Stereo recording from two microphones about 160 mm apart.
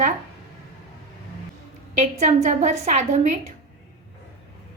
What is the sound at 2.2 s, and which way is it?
A woman's voice, 50° right (ahead or behind).